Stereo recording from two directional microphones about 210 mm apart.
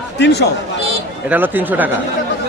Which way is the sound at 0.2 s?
55° left (ahead or behind).